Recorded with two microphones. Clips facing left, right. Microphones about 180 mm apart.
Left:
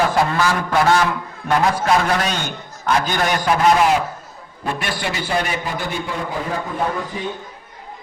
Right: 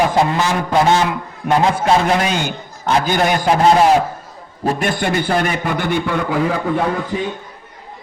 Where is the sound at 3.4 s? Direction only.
30° right (ahead or behind).